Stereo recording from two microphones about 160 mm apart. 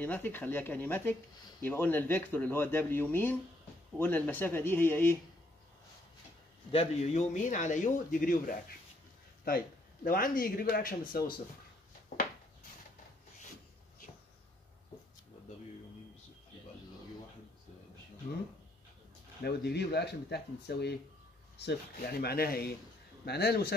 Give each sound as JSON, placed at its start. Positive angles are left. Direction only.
{"t": 0.0, "sound": "speech", "side_deg": 10}
{"t": 6.7, "sound": "speech", "side_deg": 40}
{"t": 10.0, "sound": "speech", "side_deg": 60}
{"t": 19.4, "sound": "speech", "side_deg": 85}
{"t": 21.5, "sound": "speech", "side_deg": 80}
{"t": 23.2, "sound": "speech", "side_deg": 90}